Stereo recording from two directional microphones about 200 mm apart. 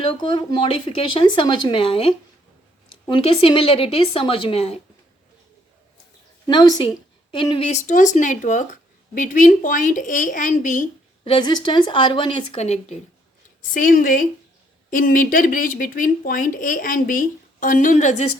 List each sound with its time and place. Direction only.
0.2 s speech: 25° left (ahead or behind)
6.5 s a woman's voice: 20° left (ahead or behind); by 10.8 s 40° left (ahead or behind)
11.2 s speech: 25° left (ahead or behind)